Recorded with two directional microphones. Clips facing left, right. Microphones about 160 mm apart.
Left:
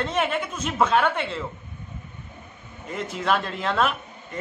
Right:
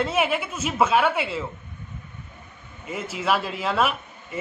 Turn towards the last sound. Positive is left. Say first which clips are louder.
# even
turn(degrees=-5)  # may be behind; listen again after turning